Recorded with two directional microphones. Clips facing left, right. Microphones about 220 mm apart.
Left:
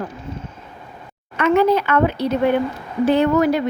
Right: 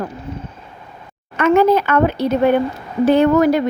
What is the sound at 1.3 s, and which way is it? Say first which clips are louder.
A woman's voice: right 3 dB; 45° right (ahead or behind).